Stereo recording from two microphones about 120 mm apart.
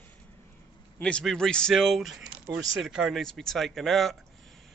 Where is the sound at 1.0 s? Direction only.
10° left (ahead or behind).